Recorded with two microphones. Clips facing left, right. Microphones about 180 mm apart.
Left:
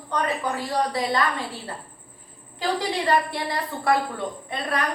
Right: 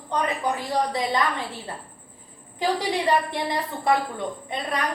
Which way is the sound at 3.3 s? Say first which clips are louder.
Right 1 dB; 20° right (ahead or behind).